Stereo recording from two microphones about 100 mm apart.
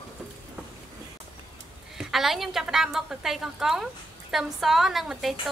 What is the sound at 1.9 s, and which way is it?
A woman's voice, 5° right (ahead or behind).